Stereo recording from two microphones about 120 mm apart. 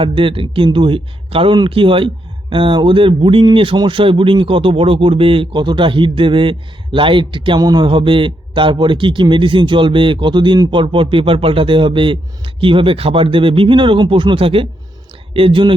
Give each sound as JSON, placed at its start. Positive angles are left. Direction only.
{"t": 0.0, "sound": "speech", "side_deg": -50}